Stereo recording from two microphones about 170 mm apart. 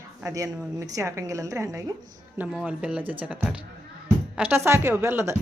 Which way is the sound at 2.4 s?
5° right (ahead or behind).